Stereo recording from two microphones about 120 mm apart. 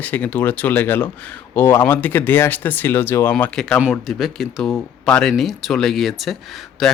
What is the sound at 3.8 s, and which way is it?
Speech, 5° right (ahead or behind).